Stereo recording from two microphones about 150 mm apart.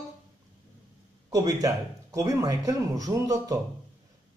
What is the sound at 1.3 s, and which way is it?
Speech, 25° right (ahead or behind).